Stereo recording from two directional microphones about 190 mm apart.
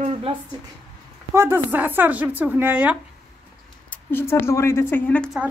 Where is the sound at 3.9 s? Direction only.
10° left (ahead or behind).